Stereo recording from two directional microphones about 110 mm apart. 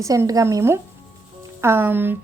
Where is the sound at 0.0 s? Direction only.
30° right (ahead or behind).